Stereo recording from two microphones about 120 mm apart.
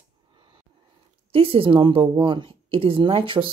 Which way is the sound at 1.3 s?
50° right (ahead or behind).